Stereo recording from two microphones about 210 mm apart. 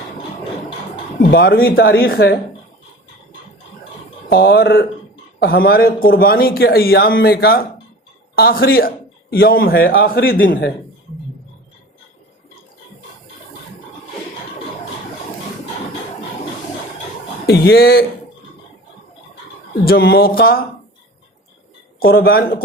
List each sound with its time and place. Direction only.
1.3 s speech: 45° left (ahead or behind)
4.3 s speech: 45° left (ahead or behind)
17.4 s a man's voice: 50° left (ahead or behind)
19.8 s speech: 45° left (ahead or behind)
22.0 s speech: 45° left (ahead or behind)